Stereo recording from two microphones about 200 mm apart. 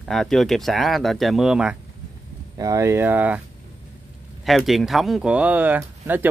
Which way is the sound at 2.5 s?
15° right (ahead or behind).